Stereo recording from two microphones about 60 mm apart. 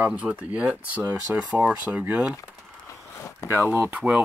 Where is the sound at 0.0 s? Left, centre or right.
Right.